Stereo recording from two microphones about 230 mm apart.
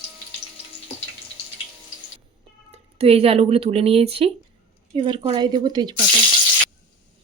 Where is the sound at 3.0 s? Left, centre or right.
Right.